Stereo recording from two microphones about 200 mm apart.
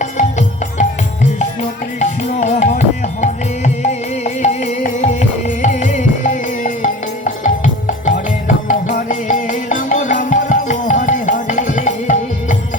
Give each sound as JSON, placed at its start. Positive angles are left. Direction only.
{"t": 0.0, "sound": "music", "side_deg": 35}
{"t": 2.0, "sound": "music", "side_deg": 35}